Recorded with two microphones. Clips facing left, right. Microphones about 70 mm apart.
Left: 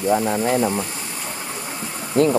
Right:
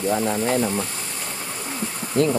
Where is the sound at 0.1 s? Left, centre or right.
Centre.